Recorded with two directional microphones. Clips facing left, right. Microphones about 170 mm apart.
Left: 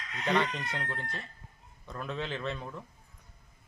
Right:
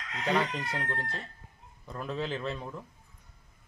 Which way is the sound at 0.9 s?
35° right (ahead or behind).